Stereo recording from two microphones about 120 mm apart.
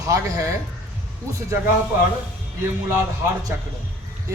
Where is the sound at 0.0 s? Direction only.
30° right (ahead or behind).